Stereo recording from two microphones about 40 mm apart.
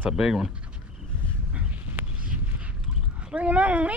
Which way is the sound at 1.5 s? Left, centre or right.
Right.